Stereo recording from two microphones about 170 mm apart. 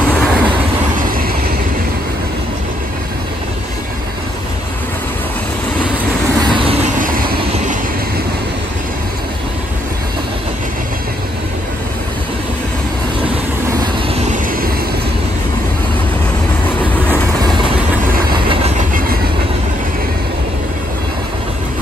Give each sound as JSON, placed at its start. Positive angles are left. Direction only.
{"t": 0.1, "sound": "train", "side_deg": -5}
{"t": 6.4, "sound": "vehicle", "side_deg": -30}
{"t": 7.0, "sound": "vehicle", "side_deg": -55}
{"t": 14.2, "sound": "vehicle", "side_deg": -50}
{"t": 18.3, "sound": "train", "side_deg": -30}
{"t": 18.8, "sound": "train", "side_deg": -55}